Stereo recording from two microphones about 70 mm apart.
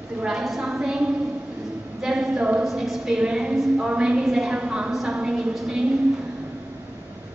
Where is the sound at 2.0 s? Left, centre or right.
Centre.